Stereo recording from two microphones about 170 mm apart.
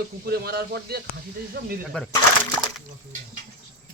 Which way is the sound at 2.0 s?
5° left (ahead or behind).